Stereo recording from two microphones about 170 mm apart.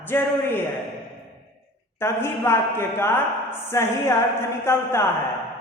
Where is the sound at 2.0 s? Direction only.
15° left (ahead or behind).